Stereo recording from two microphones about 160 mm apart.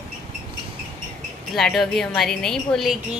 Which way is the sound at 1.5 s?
Centre (ahead or behind).